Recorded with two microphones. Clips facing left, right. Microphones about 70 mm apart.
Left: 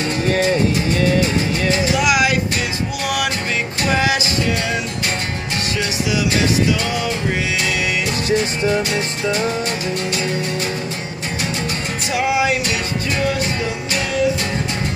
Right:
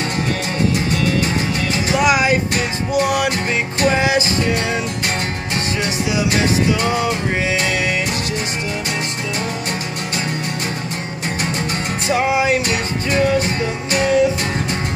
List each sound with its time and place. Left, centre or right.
2.0 s music: right
3.9 s music: right
6.8 s music: right
12.1 s music: right